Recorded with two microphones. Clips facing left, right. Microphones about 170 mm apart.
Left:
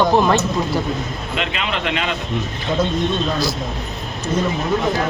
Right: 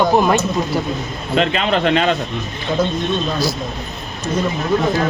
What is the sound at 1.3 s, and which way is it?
Speech, 40° right (ahead or behind).